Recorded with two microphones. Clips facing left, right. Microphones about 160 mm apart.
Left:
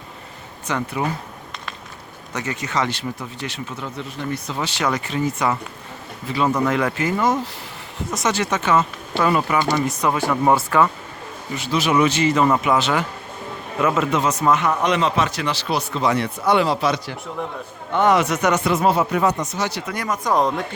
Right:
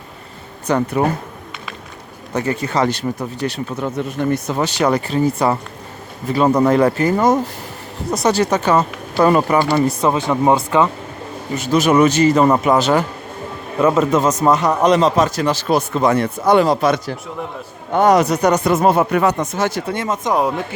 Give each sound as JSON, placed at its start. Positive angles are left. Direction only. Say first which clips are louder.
{"t": 0.7, "sound": "speech", "louder": "right 7 dB", "side_deg": -50}
{"t": 2.3, "sound": "a man's voice", "louder": "right 6 dB", "side_deg": -35}
{"t": 11.5, "sound": "a man's voice", "louder": "right 6 dB", "side_deg": -45}
{"t": 19.8, "sound": "speech", "louder": "right 4 dB", "side_deg": -25}
{"t": 20.3, "sound": "speech", "louder": "right 1 dB", "side_deg": -10}